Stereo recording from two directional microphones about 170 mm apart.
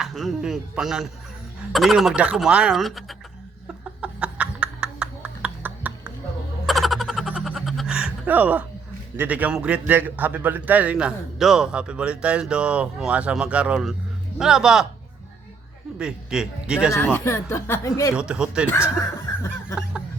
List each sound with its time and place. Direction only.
0.0 s speech: centre (ahead or behind)
4.0 s a sound: 5° right (ahead or behind)
6.7 s music: centre (ahead or behind)
9.1 s a man's voice: 10° right (ahead or behind)
16.0 s speech: 5° right (ahead or behind)
16.9 s speech: 10° left (ahead or behind)
18.2 s speech: 5° right (ahead or behind)